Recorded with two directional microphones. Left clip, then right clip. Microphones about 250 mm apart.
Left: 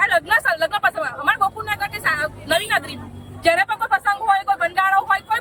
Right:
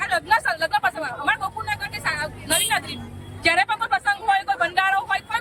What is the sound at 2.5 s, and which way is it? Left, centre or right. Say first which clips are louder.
Speech: left 3 dB; left.